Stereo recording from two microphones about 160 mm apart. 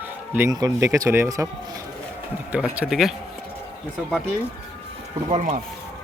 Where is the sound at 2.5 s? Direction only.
10° right (ahead or behind).